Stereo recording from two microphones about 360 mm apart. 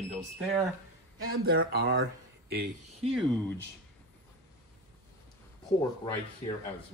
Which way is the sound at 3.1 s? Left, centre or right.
Centre.